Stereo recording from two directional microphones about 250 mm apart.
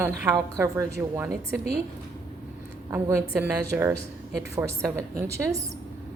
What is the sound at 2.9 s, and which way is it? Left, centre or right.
Speech, centre.